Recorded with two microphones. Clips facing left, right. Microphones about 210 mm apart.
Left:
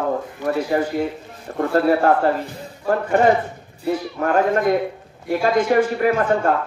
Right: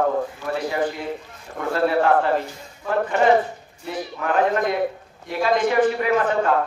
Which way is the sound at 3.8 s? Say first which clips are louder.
Left 7 dB; 45° left (ahead or behind).